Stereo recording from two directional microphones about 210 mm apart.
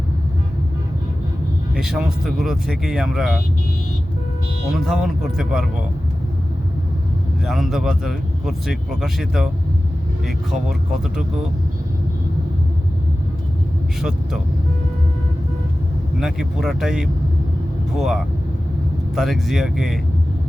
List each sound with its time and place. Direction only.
1.7 s speech: 5° right (ahead or behind)
4.7 s speech: 5° right (ahead or behind)
7.4 s speech: centre (ahead or behind)
16.2 s speech: centre (ahead or behind)